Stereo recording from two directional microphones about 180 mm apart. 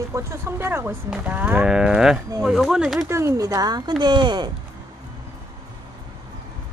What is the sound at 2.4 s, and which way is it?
Speech, centre (ahead or behind).